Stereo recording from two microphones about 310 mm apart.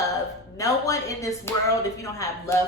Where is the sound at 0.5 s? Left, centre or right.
Centre.